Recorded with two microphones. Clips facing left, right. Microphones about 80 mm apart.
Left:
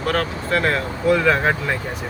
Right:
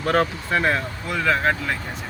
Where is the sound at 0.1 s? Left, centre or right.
Right.